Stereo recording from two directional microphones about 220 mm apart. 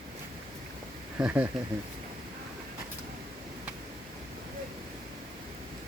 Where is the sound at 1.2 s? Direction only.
5° right (ahead or behind).